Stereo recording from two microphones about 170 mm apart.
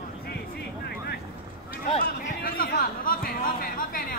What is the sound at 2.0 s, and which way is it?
Chatter, 60° left (ahead or behind).